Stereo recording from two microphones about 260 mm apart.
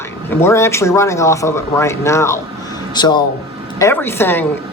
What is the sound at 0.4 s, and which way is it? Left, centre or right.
A woman's voice, centre.